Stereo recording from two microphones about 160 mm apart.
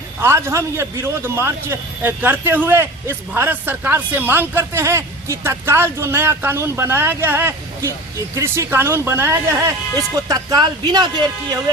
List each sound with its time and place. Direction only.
0.2 s a man's voice: 15° right (ahead or behind)